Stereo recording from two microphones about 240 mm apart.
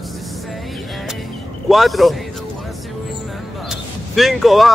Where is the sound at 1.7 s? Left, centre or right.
Centre.